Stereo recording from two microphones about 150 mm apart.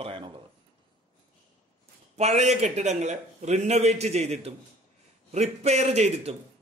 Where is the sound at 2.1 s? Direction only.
50° right (ahead or behind).